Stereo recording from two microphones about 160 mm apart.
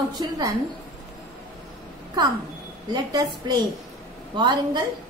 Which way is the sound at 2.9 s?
25° right (ahead or behind).